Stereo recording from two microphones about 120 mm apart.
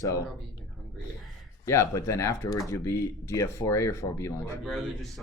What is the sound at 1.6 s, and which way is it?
Speech, 25° left (ahead or behind).